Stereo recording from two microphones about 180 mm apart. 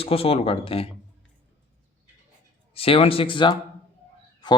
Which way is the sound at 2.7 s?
30° left (ahead or behind).